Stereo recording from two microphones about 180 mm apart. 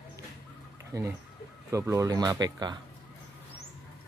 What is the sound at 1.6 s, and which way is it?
Speech, 15° right (ahead or behind).